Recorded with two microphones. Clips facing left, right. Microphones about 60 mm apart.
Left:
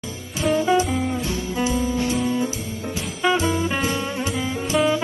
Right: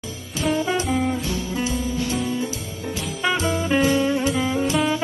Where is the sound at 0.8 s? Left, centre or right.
Centre.